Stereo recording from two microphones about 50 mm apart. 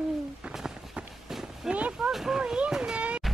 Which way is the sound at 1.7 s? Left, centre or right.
Right.